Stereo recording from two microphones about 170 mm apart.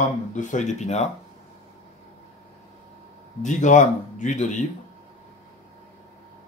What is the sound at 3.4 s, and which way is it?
Speech, 45° left (ahead or behind).